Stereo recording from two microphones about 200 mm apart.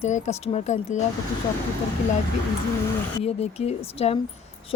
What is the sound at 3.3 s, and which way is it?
Speech, 30° left (ahead or behind).